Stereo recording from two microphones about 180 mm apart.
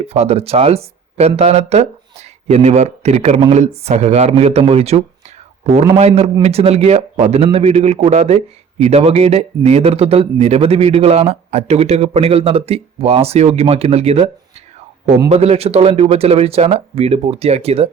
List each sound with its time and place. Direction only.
0.0 s a man's voice: 35° right (ahead or behind)